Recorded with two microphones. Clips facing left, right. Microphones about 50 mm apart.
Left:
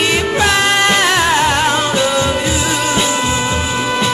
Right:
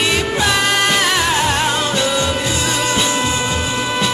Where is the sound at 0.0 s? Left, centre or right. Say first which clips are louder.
Left 3 dB; centre.